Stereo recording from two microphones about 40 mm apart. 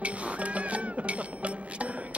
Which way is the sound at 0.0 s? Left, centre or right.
Right.